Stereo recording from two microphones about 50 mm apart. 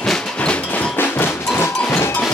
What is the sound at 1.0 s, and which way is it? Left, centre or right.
Percussion, left.